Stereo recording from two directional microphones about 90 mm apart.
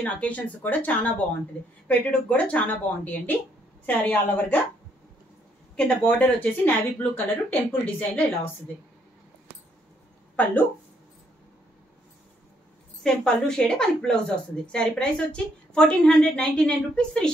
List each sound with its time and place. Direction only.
0.0 s speech: 15° left (ahead or behind)
5.8 s a woman's voice: 10° left (ahead or behind)
10.3 s speech: 15° left (ahead or behind)
13.0 s speech: 5° left (ahead or behind)